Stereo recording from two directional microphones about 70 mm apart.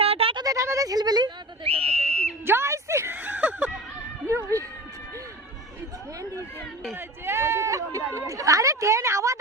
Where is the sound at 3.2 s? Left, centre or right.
Right.